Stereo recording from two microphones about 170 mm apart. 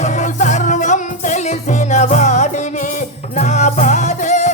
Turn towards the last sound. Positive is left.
turn(degrees=45)  # may be behind; listen again after turning